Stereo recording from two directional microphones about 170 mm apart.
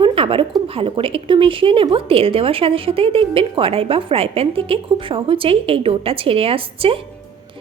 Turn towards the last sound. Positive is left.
turn(degrees=-30)  # may be behind; listen again after turning